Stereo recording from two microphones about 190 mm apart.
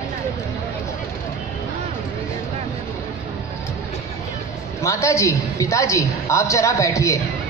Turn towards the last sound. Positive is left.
turn(degrees=15)  # may be behind; listen again after turning